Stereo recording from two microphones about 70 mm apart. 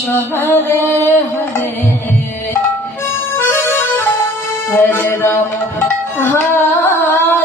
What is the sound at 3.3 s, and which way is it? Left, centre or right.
Music, left.